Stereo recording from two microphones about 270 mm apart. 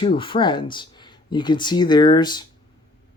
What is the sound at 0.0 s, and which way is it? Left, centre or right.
Speech, centre.